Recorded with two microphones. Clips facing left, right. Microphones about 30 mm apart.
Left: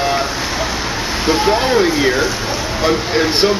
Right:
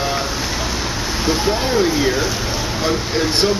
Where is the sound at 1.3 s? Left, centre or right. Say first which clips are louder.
Left 5 dB; centre.